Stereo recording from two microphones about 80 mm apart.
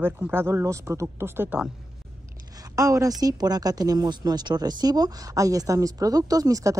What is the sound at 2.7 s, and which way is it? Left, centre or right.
Speech, right.